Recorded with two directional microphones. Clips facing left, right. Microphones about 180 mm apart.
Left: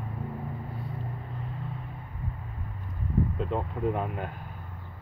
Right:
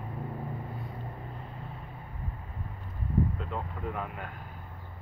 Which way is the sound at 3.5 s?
30° left (ahead or behind).